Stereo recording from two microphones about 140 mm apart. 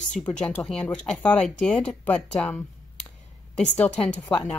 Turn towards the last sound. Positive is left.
turn(degrees=10)  # may be behind; listen again after turning